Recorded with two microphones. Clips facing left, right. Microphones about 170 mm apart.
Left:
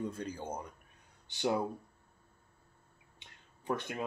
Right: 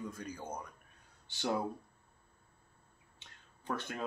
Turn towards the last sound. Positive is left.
turn(degrees=15)  # may be behind; listen again after turning